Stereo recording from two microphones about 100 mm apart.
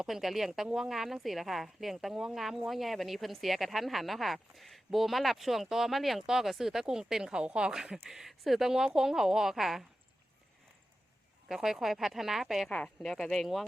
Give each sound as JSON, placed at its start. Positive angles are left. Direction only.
{"t": 0.0, "sound": "speech", "side_deg": 0}
{"t": 11.4, "sound": "speech", "side_deg": -5}
{"t": 12.7, "sound": "speech", "side_deg": 10}